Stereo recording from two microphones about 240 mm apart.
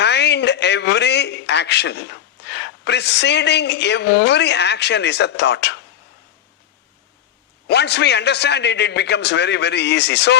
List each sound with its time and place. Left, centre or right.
0.0 s a man's voice: left
7.7 s a man's voice: left